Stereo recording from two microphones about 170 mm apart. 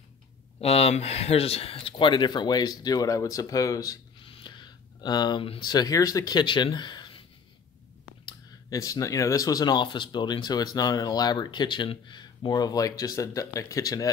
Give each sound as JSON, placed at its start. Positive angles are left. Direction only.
{"t": 0.6, "sound": "speech", "side_deg": 35}
{"t": 8.3, "sound": "speech", "side_deg": 20}